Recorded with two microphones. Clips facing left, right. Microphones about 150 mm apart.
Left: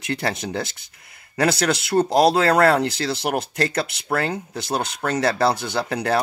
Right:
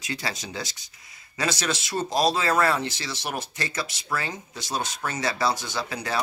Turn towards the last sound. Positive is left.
turn(degrees=60)  # may be behind; listen again after turning